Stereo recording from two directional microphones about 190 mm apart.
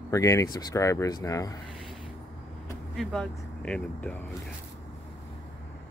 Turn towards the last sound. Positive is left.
turn(degrees=5)  # may be behind; listen again after turning